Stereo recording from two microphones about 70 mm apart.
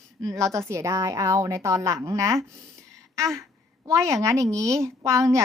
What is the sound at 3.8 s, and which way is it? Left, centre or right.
A woman's voice, right.